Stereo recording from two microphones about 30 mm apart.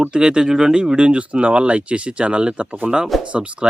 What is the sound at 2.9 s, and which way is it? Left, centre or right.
Speech, centre.